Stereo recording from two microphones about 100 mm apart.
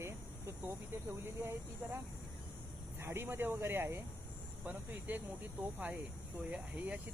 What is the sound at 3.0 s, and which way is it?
Speech, 25° right (ahead or behind).